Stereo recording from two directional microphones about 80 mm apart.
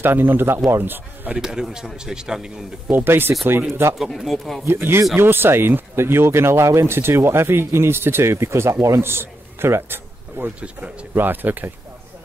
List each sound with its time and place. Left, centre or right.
0.0 s speech: right
1.4 s a man's voice: centre
2.9 s speech: right
4.0 s speech: centre
4.6 s a man's voice: right